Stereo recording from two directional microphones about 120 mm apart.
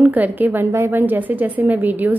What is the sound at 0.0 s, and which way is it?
A woman's voice, 15° right (ahead or behind).